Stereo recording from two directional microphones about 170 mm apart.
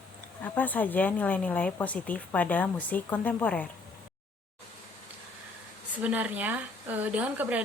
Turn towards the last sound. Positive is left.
turn(degrees=-10)  # may be behind; listen again after turning